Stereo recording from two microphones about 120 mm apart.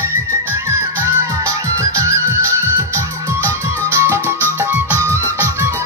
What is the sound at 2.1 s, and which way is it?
Music, 25° right (ahead or behind).